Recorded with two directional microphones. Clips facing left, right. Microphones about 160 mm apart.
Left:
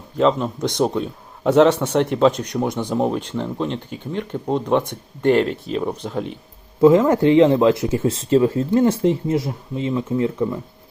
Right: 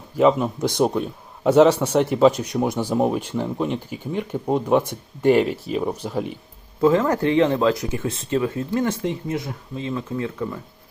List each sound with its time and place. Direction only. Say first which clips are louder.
0.2 s a man's voice: right 1 dB; 10° right (ahead or behind)
6.8 s speech: left 5 dB; 20° left (ahead or behind)